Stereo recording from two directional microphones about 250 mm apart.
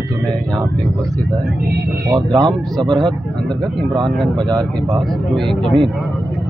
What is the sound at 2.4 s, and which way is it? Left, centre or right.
Speech, centre.